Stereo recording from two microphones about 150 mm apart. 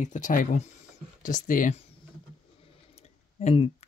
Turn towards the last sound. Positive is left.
turn(degrees=40)  # may be behind; listen again after turning